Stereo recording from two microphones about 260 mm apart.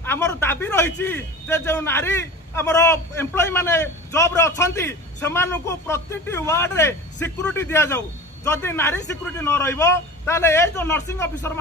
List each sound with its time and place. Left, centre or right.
0.0 s a man's voice: centre